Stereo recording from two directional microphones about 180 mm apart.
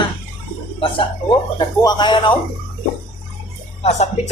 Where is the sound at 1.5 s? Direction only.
25° left (ahead or behind).